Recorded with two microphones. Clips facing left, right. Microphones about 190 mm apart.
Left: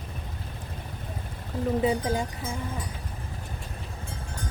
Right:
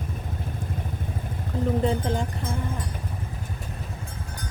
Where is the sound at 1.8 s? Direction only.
5° left (ahead or behind).